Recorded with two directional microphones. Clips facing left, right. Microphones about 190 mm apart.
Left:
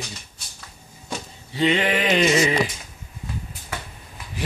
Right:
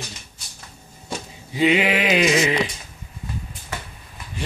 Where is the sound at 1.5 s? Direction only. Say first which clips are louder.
Right 2 dB; 10° right (ahead or behind).